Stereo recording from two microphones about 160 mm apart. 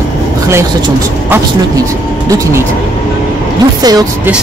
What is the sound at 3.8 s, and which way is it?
Speech, 25° right (ahead or behind).